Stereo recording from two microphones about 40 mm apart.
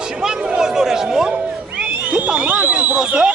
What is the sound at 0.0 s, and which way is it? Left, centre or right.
Chatter, centre.